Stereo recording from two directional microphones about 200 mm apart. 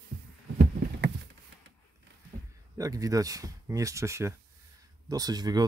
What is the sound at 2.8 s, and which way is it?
Speech, 15° right (ahead or behind).